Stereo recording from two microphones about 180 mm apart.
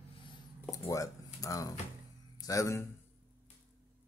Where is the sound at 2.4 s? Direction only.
20° left (ahead or behind).